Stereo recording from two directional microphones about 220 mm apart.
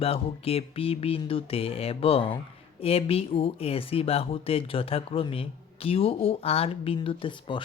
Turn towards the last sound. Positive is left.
turn(degrees=25)  # may be behind; listen again after turning